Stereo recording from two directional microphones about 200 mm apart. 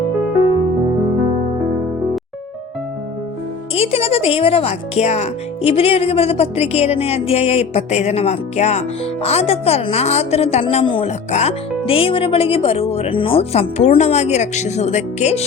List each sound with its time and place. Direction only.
3.8 s speech: 30° left (ahead or behind)